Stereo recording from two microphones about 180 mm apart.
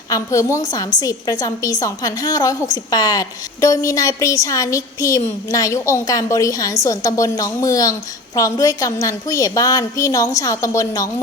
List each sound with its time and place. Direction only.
0.1 s a woman's voice: 15° left (ahead or behind)